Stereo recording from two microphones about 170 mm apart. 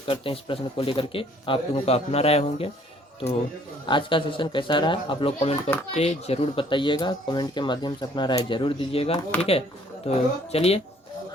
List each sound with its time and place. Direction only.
0.1 s speech: 30° left (ahead or behind)
3.8 s speech: 30° left (ahead or behind)
9.3 s speech: 10° left (ahead or behind)
10.0 s speech: 35° left (ahead or behind)